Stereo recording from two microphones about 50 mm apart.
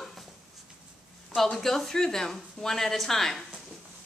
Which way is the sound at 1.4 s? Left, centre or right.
Centre.